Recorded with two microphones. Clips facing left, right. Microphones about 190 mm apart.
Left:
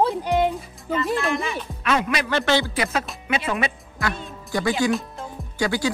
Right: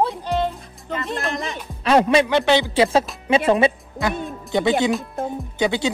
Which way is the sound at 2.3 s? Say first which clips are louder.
Right 4 dB; 15° right (ahead or behind).